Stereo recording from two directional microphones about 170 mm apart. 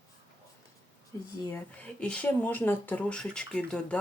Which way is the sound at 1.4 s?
10° left (ahead or behind).